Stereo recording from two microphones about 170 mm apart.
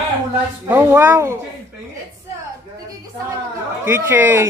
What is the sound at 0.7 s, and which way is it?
Speech, 15° right (ahead or behind).